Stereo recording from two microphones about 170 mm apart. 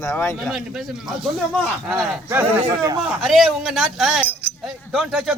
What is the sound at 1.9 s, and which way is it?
Speech, 15° right (ahead or behind).